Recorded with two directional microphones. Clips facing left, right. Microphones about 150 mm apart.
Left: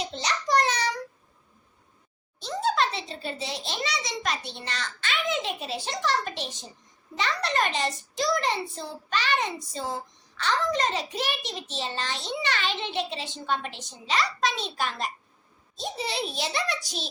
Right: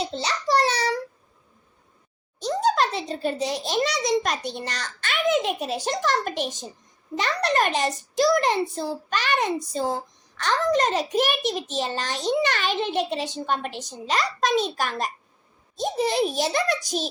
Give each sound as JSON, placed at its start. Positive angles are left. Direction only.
{"t": 0.0, "sound": "child singing", "side_deg": -30}
{"t": 2.4, "sound": "a child's voice", "side_deg": -45}